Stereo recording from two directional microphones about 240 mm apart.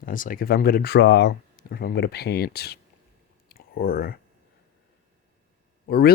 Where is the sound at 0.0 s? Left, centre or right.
Left.